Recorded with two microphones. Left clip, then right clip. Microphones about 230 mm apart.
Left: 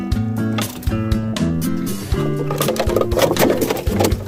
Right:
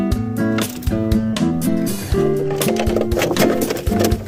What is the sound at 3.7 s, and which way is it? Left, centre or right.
Music, centre.